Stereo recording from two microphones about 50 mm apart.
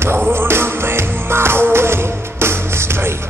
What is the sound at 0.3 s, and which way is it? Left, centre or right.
Music, right.